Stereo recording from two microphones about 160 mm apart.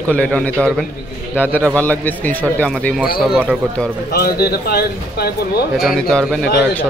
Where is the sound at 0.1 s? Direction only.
5° left (ahead or behind).